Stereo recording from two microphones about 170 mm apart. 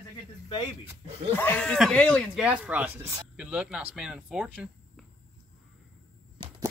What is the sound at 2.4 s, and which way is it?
Speech, 10° right (ahead or behind).